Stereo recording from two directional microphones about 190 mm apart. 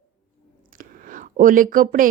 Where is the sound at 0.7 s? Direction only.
45° right (ahead or behind).